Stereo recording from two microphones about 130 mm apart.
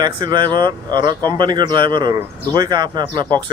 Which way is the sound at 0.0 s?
35° right (ahead or behind).